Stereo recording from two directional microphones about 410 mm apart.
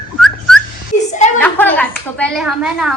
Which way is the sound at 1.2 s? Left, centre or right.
Centre.